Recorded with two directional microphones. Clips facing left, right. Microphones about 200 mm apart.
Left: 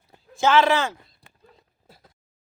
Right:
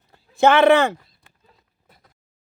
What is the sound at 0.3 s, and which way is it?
Speech, 60° right (ahead or behind).